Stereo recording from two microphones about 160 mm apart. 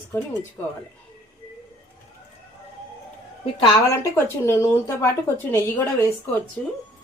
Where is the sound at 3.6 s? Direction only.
20° left (ahead or behind).